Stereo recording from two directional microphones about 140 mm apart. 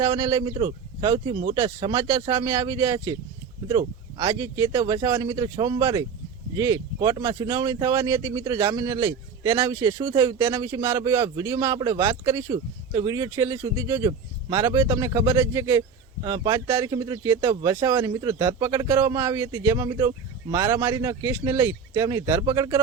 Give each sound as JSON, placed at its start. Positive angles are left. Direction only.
{"t": 0.0, "sound": "speech", "side_deg": -25}
{"t": 16.9, "sound": "speech", "side_deg": -25}